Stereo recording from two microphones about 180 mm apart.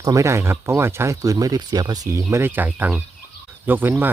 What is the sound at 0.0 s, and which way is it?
Speech, 15° right (ahead or behind).